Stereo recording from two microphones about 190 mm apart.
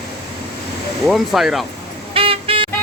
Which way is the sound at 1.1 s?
Centre (ahead or behind).